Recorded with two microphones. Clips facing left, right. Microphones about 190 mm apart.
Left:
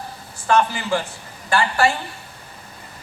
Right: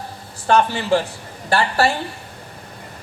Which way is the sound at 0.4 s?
35° right (ahead or behind).